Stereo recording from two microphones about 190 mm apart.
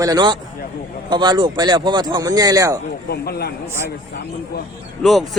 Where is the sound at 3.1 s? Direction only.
55° left (ahead or behind).